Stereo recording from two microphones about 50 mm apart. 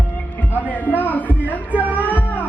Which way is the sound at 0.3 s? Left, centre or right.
Left.